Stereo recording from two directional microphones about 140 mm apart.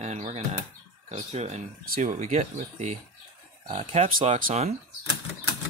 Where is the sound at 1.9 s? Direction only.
60° right (ahead or behind).